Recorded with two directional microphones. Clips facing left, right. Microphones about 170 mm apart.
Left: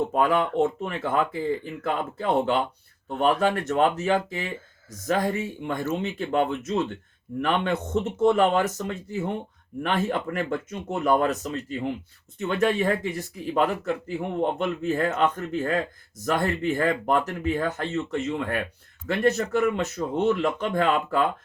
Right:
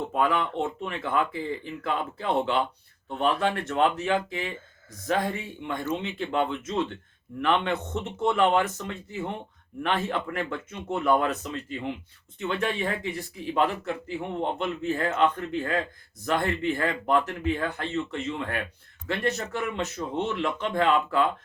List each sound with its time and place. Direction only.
0.1 s speech: 40° left (ahead or behind)
9.8 s speech: 40° left (ahead or behind)